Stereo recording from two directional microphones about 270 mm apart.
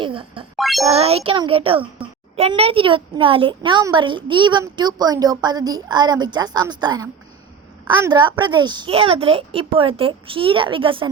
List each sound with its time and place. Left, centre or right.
0.0 s music: centre
0.5 s a child's voice: centre
0.9 s a child's voice: right